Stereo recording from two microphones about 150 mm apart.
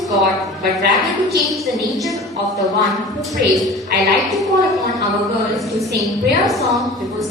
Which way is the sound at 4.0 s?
Centre (ahead or behind).